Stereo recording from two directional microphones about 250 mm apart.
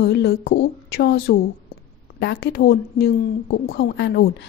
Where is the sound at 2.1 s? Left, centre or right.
Left.